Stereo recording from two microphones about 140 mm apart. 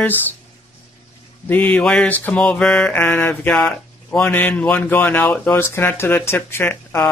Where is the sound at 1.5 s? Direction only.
10° left (ahead or behind).